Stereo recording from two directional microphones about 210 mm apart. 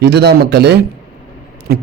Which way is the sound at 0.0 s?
50° right (ahead or behind).